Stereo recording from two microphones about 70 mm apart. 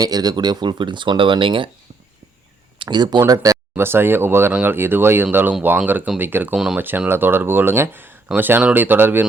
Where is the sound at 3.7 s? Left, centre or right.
Right.